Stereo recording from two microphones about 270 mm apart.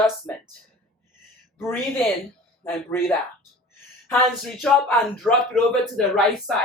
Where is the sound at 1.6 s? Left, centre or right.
Centre.